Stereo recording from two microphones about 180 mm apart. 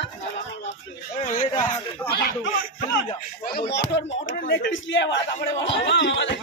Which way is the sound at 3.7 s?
80° left.